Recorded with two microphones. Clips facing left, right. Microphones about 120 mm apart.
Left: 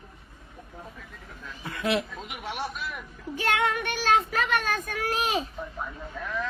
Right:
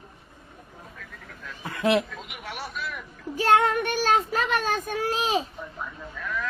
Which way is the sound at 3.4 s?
35° right (ahead or behind).